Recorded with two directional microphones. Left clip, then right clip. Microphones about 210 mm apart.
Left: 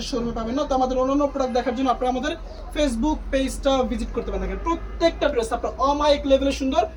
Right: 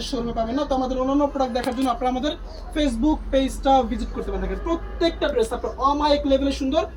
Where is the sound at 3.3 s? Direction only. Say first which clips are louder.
Right 3 dB; 35° left (ahead or behind).